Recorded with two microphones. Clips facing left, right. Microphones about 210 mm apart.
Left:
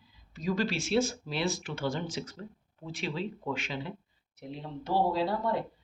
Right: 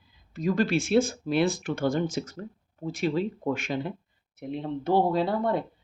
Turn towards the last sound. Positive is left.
turn(degrees=-55)  # may be behind; listen again after turning